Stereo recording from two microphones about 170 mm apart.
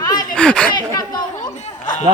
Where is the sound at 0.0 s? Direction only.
20° left (ahead or behind).